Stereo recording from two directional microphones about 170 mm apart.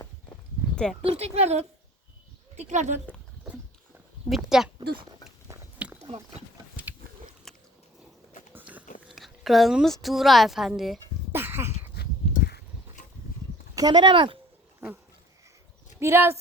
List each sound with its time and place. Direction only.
1.0 s speech: 35° right (ahead or behind)
4.3 s speech: centre (ahead or behind)
5.8 s a sound: 5° right (ahead or behind)
7.5 s a sound: centre (ahead or behind)
8.5 s biting: 10° right (ahead or behind)
9.0 s a woman's voice: centre (ahead or behind)
11.3 s a sound: 15° right (ahead or behind)
12.0 s dog: 70° left (ahead or behind)
13.7 s speech: 25° right (ahead or behind)
16.0 s speech: 15° right (ahead or behind)